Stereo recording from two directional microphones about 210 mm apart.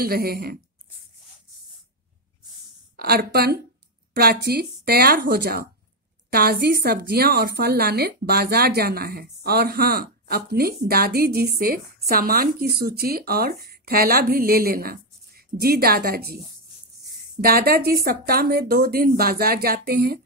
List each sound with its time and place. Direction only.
0.0 s a woman's voice: 45° right (ahead or behind)
3.0 s a woman's voice: 45° right (ahead or behind)
17.4 s a woman's voice: 45° right (ahead or behind)